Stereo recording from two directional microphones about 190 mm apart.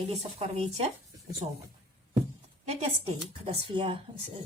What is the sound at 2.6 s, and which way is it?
Speech, 30° right (ahead or behind).